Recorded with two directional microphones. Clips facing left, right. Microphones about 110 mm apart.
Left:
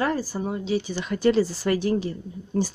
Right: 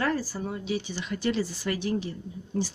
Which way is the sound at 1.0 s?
45° left (ahead or behind).